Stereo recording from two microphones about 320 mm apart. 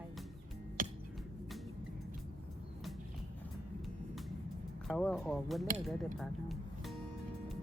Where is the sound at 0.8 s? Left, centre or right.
Right.